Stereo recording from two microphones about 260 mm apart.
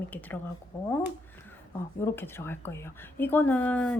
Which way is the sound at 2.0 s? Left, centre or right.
Centre.